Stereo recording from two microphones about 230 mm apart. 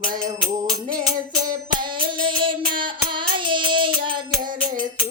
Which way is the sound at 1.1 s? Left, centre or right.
Centre.